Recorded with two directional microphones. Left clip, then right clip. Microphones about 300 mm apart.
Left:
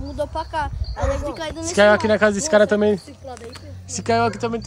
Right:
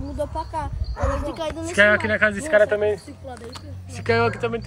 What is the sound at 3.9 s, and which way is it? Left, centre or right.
Speech, centre.